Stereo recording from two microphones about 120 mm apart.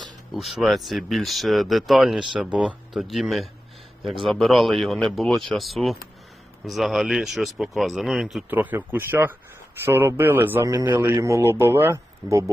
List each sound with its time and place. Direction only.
0.3 s speech: 5° right (ahead or behind)
8.4 s a man's voice: 15° right (ahead or behind)